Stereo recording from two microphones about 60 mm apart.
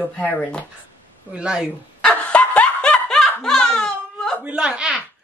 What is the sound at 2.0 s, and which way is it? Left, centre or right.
Snicker, centre.